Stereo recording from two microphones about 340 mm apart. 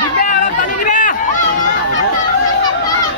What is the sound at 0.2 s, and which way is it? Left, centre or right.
Chatter, left.